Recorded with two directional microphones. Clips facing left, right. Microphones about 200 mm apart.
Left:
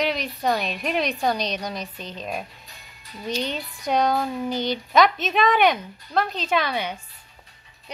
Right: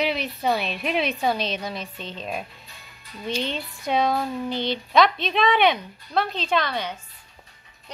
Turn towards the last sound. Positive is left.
turn(degrees=10)  # may be behind; listen again after turning